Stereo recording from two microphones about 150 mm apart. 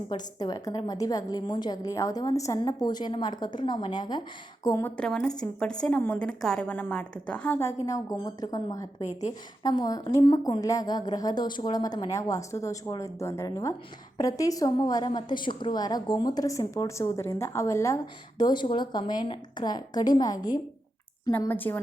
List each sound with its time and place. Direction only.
0.1 s a woman's voice: 25° left (ahead or behind)
4.9 s a woman's voice: 5° left (ahead or behind); by 20.6 s 25° left (ahead or behind)
21.3 s a woman's voice: 15° left (ahead or behind)